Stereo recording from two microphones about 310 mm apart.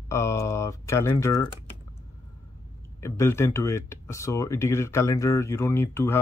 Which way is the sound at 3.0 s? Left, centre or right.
Centre.